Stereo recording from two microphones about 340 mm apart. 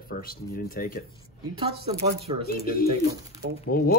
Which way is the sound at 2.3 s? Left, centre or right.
Centre.